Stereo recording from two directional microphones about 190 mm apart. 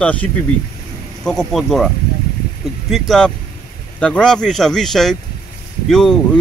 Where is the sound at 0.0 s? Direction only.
5° left (ahead or behind).